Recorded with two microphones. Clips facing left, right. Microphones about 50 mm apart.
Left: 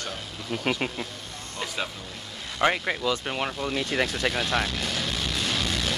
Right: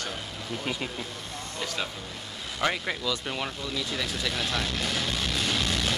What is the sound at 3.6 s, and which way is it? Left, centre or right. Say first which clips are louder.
Speech: left 5 dB; left.